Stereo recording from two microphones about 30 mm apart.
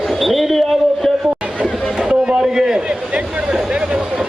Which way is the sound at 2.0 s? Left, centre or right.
Right.